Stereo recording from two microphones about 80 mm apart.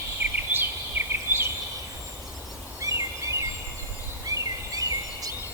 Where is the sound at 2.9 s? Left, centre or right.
Right.